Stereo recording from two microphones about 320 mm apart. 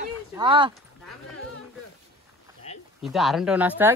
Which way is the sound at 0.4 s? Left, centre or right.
Centre.